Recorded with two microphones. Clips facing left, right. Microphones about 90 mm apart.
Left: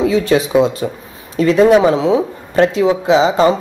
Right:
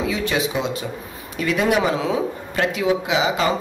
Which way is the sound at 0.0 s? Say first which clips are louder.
Left 9 dB; 35° left (ahead or behind).